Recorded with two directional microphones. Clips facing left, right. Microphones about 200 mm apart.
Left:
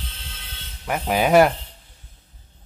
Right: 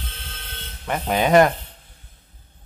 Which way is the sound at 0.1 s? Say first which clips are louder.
Right 3 dB; 55° right (ahead or behind).